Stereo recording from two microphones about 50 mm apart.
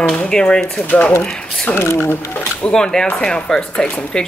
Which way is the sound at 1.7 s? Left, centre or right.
Left.